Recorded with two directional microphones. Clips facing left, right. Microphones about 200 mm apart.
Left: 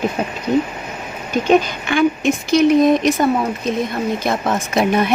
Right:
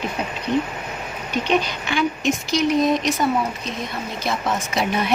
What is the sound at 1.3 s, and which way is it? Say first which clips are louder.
Speech: left 7 dB; 45° left (ahead or behind).